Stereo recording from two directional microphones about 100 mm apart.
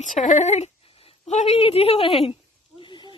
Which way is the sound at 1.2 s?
90° left.